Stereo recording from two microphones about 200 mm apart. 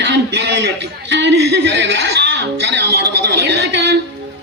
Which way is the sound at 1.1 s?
60° right (ahead or behind).